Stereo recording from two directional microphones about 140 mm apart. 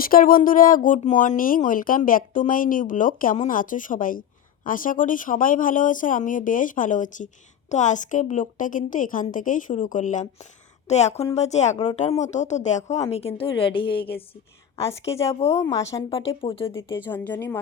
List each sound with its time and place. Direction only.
0.0 s speech: 90° left; by 10.2 s 65° left (ahead or behind)
10.8 s a woman's voice: 55° left (ahead or behind)
14.8 s a woman's voice: 20° left (ahead or behind)
16.0 s speech: 40° left (ahead or behind)
17.1 s a woman's voice: 10° left (ahead or behind)